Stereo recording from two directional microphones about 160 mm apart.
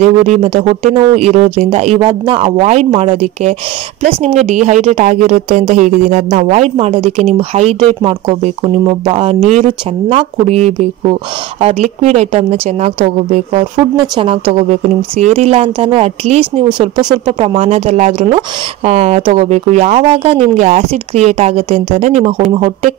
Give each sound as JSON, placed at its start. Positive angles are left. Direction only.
{"t": 0.0, "sound": "speech", "side_deg": -40}
{"t": 2.6, "sound": "speech", "side_deg": -45}
{"t": 13.7, "sound": "speech", "side_deg": -25}